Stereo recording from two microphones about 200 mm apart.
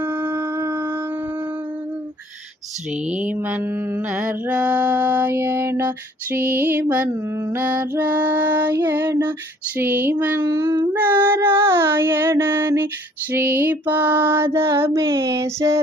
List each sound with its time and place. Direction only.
0.0 s wind instrument: 10° right (ahead or behind)
0.3 s howl: 20° right (ahead or behind)
3.1 s female singing: 5° right (ahead or behind)